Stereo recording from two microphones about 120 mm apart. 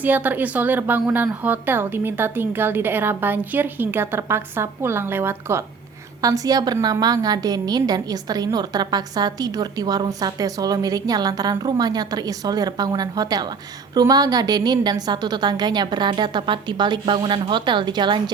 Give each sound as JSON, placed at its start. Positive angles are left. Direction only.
{"t": 0.0, "sound": "a woman's voice", "side_deg": -15}